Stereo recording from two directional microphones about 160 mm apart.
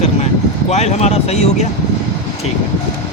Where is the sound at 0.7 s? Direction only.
45° left (ahead or behind).